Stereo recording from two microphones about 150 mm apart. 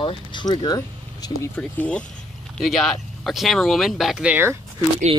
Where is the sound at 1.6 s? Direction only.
10° left (ahead or behind); by 4.6 s 10° right (ahead or behind).